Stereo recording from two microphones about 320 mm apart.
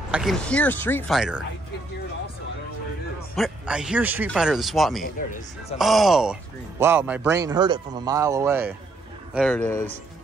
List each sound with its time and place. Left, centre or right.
0.1 s a man's voice: centre
3.3 s a man's voice: centre
5.0 s speech: left
5.8 s a man's voice: centre